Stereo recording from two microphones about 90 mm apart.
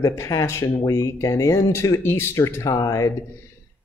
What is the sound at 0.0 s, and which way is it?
Speech, 30° left (ahead or behind).